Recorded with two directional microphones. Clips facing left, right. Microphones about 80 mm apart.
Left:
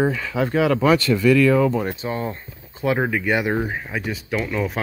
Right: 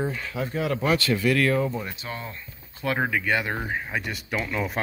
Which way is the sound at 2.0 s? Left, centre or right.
Left.